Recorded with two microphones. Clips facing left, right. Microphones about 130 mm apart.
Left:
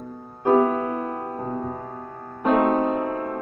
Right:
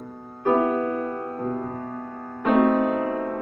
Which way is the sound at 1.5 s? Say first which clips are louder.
Even; 15° left (ahead or behind).